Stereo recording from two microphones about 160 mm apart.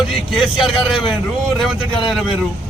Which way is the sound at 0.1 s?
Centre (ahead or behind).